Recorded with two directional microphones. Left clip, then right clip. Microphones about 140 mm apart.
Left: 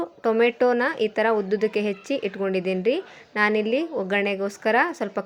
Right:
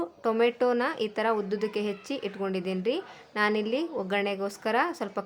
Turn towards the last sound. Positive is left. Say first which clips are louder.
# left 5 dB
turn(degrees=20)  # may be behind; listen again after turning